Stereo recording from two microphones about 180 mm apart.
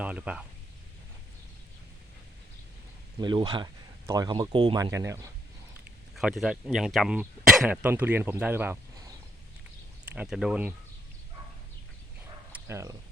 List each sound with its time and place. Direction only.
0.0 s speech: 10° right (ahead or behind)
3.2 s speech: 25° right (ahead or behind)
6.1 s speech: centre (ahead or behind)
10.1 s speech: 5° right (ahead or behind)
12.5 s a sound: 10° right (ahead or behind)